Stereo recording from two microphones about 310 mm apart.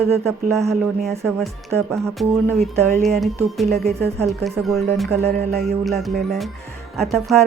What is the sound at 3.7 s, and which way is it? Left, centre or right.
Speech, right.